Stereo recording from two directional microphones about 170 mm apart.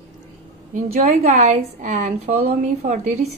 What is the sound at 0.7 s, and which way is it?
A woman's voice, 50° right (ahead or behind).